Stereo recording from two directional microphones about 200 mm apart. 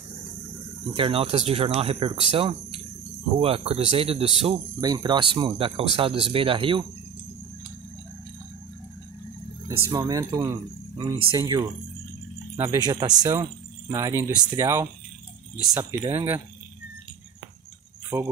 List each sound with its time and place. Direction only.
0.9 s speech: 25° right (ahead or behind)
9.7 s speech: 20° right (ahead or behind)
18.1 s speech: 20° right (ahead or behind)